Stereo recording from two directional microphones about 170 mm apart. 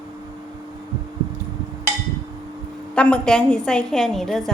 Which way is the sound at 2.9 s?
5° left (ahead or behind).